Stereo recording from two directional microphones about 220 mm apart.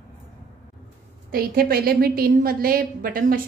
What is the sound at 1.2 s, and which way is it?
A woman's voice, 40° right (ahead or behind).